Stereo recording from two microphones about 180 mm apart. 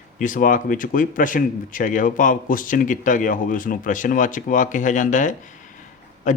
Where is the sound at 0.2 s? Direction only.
50° left (ahead or behind).